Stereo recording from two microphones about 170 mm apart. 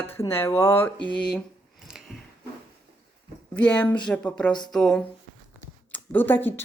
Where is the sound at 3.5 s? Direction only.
5° left (ahead or behind).